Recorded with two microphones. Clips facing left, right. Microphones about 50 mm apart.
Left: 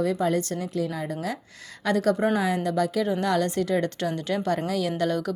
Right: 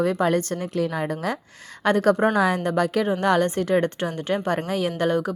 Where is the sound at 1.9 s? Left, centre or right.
Right.